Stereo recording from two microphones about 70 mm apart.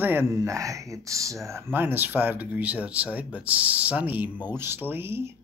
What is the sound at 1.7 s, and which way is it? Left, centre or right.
Speech, right.